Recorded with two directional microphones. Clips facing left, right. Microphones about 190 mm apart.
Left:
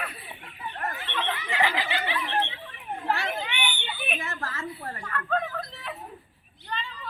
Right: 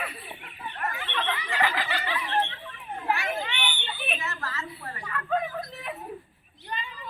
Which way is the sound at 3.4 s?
10° left (ahead or behind).